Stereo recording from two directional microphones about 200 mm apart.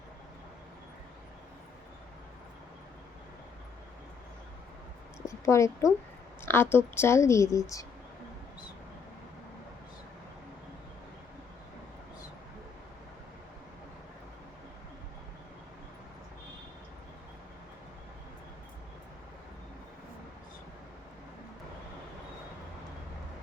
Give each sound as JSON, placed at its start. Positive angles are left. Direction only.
{"t": 5.2, "sound": "speech", "side_deg": 15}